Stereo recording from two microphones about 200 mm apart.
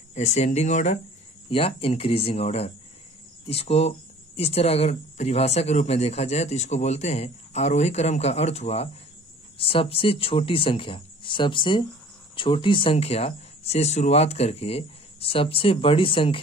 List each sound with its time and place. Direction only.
0.1 s speech: 35° left (ahead or behind)